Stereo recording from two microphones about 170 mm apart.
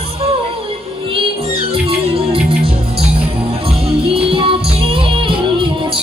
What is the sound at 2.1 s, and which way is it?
Music, 35° right (ahead or behind).